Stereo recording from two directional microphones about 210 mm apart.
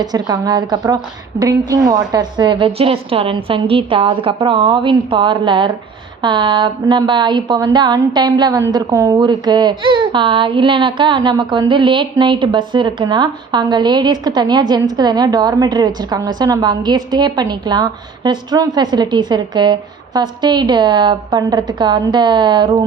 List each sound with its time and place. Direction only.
0.0 s a woman's voice: 20° right (ahead or behind)